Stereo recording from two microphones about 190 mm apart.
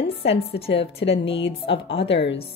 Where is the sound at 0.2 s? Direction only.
30° left (ahead or behind).